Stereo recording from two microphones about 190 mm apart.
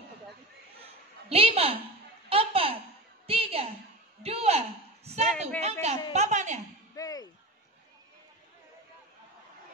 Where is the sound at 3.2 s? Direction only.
30° right (ahead or behind).